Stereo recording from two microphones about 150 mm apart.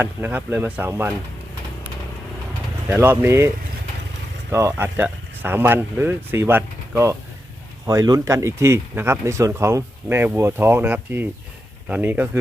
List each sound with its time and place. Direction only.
0.0 s speech: 10° right (ahead or behind)
2.9 s speech: 15° right (ahead or behind)
4.7 s speech: 10° right (ahead or behind)